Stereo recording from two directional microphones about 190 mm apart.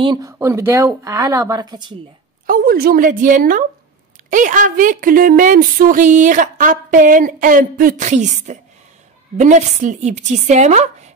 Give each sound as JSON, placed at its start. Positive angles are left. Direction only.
{"t": 0.0, "sound": "speech", "side_deg": -25}
{"t": 2.4, "sound": "a woman's voice", "side_deg": -50}